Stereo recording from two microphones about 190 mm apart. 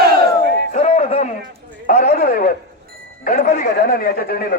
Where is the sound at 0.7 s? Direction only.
35° left (ahead or behind).